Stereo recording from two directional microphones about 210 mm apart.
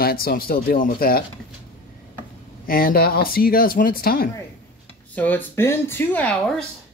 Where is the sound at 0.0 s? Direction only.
45° left (ahead or behind).